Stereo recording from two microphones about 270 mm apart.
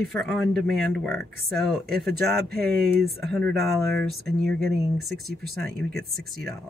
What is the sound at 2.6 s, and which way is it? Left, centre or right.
Speech, right.